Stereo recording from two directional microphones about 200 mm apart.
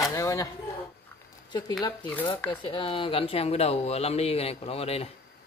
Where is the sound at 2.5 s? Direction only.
25° left (ahead or behind).